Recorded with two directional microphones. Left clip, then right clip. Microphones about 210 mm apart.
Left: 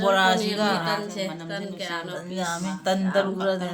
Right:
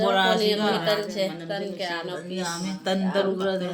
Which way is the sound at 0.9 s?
30° left (ahead or behind).